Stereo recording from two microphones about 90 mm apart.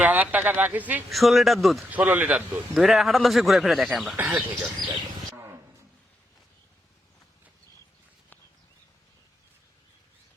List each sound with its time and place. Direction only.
0.0 s speech: 15° right (ahead or behind)
1.1 s a man's voice: centre (ahead or behind)
1.9 s speech: 20° right (ahead or behind)
2.7 s a man's voice: centre (ahead or behind)
4.2 s speech: 15° right (ahead or behind)